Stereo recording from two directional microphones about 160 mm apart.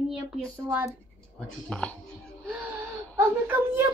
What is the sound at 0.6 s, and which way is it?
Speech, 10° right (ahead or behind).